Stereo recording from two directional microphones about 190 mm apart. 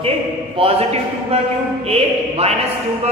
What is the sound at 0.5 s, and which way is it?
Speech, 30° right (ahead or behind).